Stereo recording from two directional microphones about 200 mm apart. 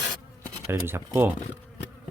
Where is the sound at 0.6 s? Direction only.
15° right (ahead or behind).